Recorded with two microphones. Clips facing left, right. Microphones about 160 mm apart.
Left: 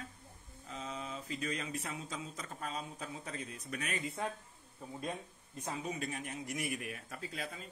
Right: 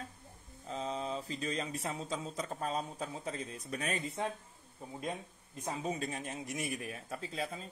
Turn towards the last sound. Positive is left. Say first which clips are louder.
# right 4 dB
turn(degrees=-30)  # may be behind; listen again after turning